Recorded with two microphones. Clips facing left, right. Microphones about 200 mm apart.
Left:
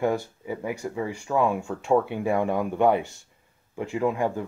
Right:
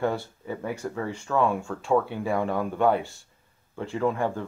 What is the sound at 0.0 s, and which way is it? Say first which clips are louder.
Speech: left 2 dB; 10° left (ahead or behind).